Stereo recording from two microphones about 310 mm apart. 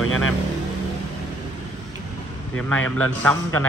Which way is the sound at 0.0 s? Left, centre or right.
Left.